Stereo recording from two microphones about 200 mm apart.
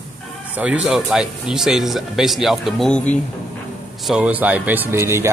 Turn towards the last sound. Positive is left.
turn(degrees=-10)  # may be behind; listen again after turning